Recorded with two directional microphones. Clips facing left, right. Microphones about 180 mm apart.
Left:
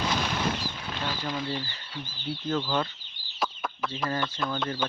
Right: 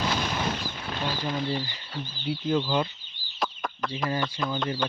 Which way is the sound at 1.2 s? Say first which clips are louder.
Right 3 dB; 15° right (ahead or behind).